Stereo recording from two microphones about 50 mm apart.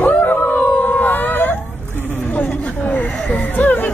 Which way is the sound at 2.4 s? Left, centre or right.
Left.